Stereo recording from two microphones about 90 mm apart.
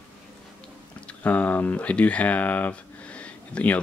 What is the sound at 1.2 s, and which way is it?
Speech, 15° left (ahead or behind).